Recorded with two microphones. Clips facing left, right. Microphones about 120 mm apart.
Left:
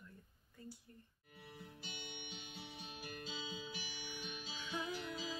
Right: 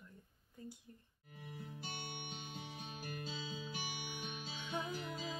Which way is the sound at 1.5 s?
45° right (ahead or behind).